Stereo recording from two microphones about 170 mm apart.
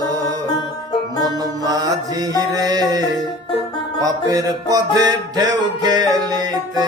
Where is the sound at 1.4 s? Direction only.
20° right (ahead or behind).